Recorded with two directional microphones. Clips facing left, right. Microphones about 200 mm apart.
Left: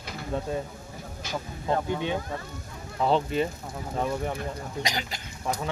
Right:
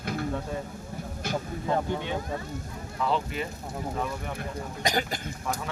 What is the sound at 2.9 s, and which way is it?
Speech, 30° left (ahead or behind).